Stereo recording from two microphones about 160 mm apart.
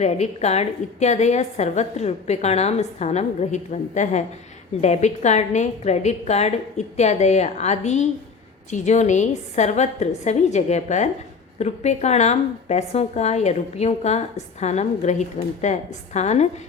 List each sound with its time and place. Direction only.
0.0 s a woman's voice: 45° left (ahead or behind)